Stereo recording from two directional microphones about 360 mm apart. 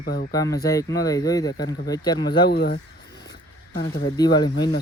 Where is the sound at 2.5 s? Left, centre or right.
Left.